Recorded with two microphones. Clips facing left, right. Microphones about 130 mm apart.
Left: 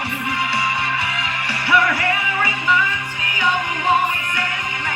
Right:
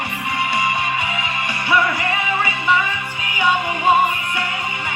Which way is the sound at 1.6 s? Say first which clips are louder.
Left 1 dB; 20° right (ahead or behind).